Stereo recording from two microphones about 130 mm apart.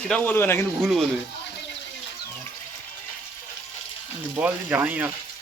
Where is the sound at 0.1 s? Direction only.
15° left (ahead or behind).